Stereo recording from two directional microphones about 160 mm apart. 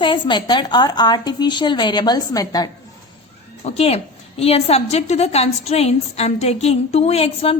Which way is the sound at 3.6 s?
40° left (ahead or behind).